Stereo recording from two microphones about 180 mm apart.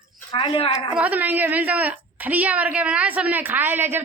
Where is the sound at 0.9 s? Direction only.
10° right (ahead or behind).